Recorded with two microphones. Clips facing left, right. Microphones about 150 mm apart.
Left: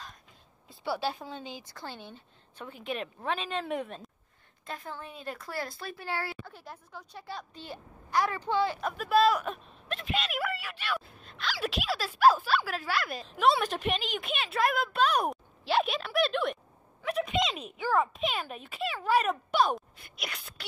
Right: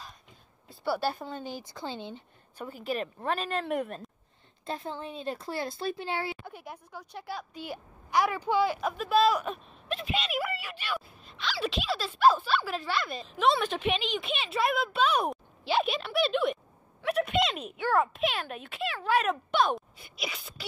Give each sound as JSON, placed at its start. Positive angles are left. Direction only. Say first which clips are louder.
{"t": 0.7, "sound": "a woman's voice", "louder": "right 2 dB", "side_deg": 0}
{"t": 1.6, "sound": "speech", "louder": "right 5 dB", "side_deg": -15}
{"t": 2.5, "sound": "speech", "louder": "right 3 dB", "side_deg": -5}
{"t": 4.6, "sound": "speech", "louder": "right 5 dB", "side_deg": -25}
{"t": 8.9, "sound": "speech", "louder": "left 1 dB", "side_deg": 0}